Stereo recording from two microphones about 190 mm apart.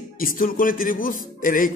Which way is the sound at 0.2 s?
50° left (ahead or behind).